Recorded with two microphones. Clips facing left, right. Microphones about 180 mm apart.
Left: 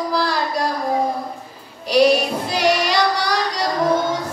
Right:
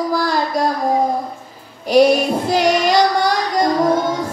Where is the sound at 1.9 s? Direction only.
50° right (ahead or behind).